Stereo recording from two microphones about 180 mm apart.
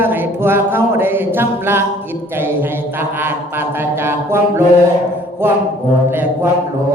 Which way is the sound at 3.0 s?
10° right (ahead or behind).